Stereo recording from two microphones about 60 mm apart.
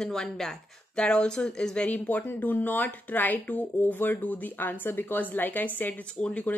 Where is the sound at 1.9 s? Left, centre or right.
Left.